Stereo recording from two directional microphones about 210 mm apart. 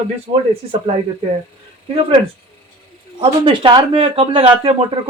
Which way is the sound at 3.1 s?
25° right (ahead or behind).